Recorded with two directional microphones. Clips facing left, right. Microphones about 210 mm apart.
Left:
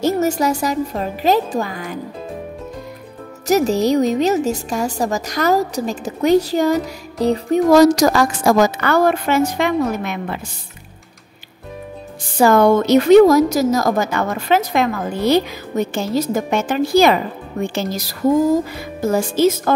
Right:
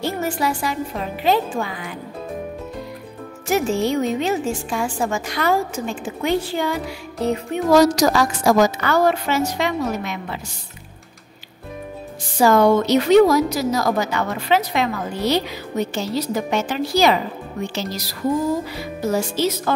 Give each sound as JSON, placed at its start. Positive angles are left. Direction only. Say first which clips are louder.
{"t": 0.0, "sound": "a woman's voice", "louder": "left 6 dB", "side_deg": 40}
{"t": 3.4, "sound": "a woman's voice", "louder": "left 4 dB", "side_deg": 40}
{"t": 7.7, "sound": "a woman's voice", "louder": "left 2 dB", "side_deg": 50}
{"t": 12.4, "sound": "a woman's voice", "louder": "left 2 dB", "side_deg": 55}